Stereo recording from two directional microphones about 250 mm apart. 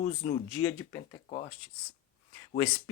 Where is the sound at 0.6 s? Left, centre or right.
Centre.